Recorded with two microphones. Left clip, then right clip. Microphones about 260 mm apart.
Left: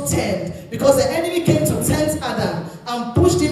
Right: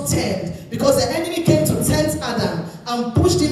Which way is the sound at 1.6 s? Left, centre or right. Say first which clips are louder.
Even; right.